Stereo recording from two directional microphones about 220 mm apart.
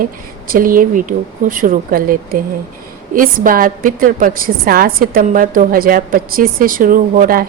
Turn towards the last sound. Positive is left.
turn(degrees=-40)  # may be behind; listen again after turning